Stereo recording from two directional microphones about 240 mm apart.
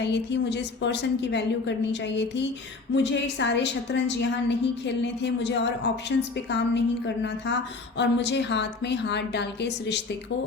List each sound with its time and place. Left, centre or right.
0.0 s a woman's voice: left